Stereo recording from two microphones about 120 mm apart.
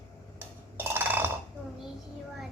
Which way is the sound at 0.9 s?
15° right (ahead or behind).